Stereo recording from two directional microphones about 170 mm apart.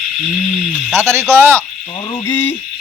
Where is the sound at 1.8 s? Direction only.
30° left (ahead or behind).